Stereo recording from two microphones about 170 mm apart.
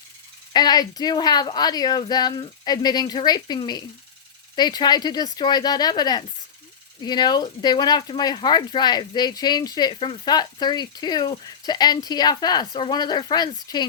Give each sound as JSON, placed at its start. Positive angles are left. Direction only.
{"t": 0.5, "sound": "speech", "side_deg": 25}